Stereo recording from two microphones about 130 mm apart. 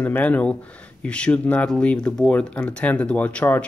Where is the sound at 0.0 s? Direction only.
10° left (ahead or behind).